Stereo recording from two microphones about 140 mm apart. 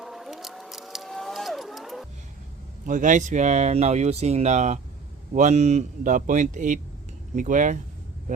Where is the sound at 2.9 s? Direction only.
65° right (ahead or behind).